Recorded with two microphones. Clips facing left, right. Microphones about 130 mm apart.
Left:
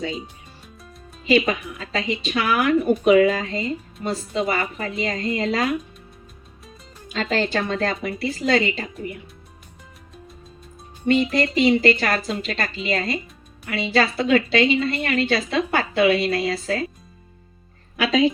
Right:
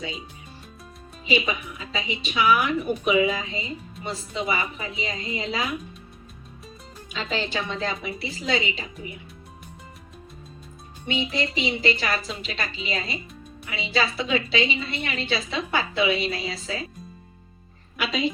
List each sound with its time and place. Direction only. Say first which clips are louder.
1.3 s a woman's voice: left 6 dB; 60° left (ahead or behind)
7.1 s a woman's voice: left 6 dB; 50° left (ahead or behind)
11.0 s a woman's voice: left 8 dB; 45° left (ahead or behind)
18.0 s a woman's voice: left 8 dB; 90° left